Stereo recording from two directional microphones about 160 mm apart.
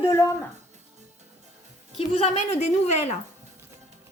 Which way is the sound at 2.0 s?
40° left (ahead or behind).